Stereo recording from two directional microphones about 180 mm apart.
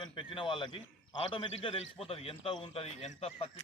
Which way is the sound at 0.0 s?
30° left (ahead or behind).